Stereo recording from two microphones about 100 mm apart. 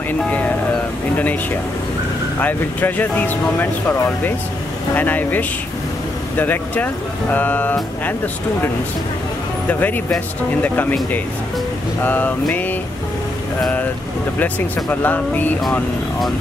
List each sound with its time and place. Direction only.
1.1 s speech: 15° left (ahead or behind)
4.9 s speech: 15° left (ahead or behind)
9.7 s speech: 20° left (ahead or behind)
12.0 s a sound: 20° left (ahead or behind)
14.4 s speech: 15° left (ahead or behind)